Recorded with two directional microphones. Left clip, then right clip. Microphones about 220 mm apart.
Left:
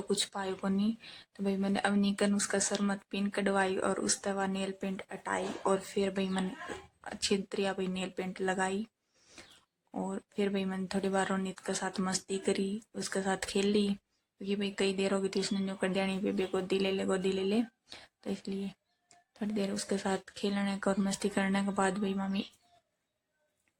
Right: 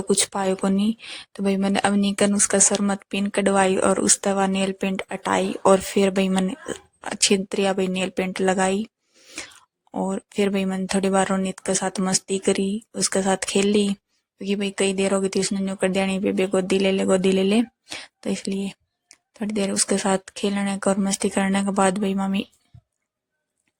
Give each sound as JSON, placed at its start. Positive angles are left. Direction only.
{"t": 0.1, "sound": "speech", "side_deg": -35}
{"t": 9.1, "sound": "a sound", "side_deg": -25}
{"t": 9.9, "sound": "speech", "side_deg": -35}